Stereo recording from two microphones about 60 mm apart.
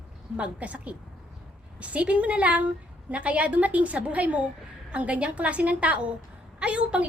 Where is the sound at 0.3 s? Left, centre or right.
Right.